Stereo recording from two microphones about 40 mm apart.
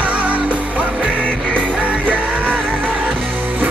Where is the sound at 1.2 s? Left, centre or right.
Left.